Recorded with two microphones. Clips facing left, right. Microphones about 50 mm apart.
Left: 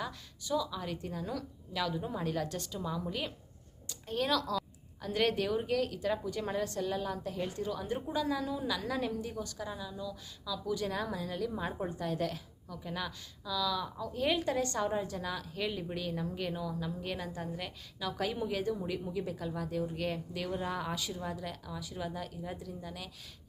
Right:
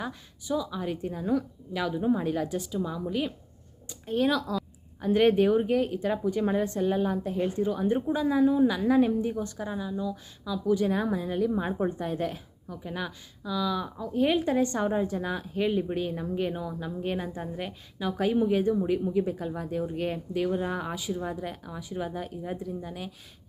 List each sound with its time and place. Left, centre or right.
0.0 s a woman's voice: centre